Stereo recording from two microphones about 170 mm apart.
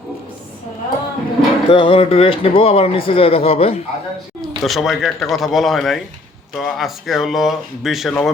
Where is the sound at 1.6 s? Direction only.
30° left (ahead or behind).